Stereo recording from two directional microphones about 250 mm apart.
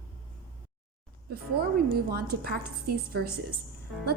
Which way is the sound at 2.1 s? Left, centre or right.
Right.